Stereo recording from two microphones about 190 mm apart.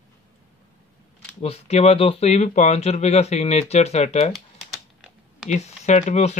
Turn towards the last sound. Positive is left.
turn(degrees=35)  # may be behind; listen again after turning